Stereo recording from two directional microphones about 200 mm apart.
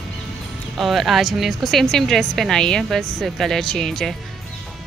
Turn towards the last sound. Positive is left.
turn(degrees=0)  # may be behind; listen again after turning